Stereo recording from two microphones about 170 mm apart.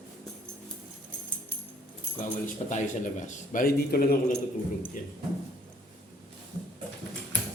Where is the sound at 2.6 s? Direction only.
45° left (ahead or behind); by 4.2 s 60° left (ahead or behind).